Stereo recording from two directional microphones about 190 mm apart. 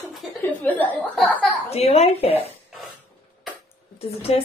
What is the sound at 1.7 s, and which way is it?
Speech, 35° left (ahead or behind).